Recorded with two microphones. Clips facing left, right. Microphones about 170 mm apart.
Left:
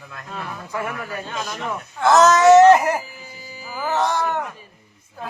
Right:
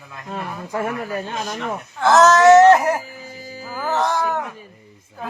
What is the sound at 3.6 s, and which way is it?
Speech, centre (ahead or behind).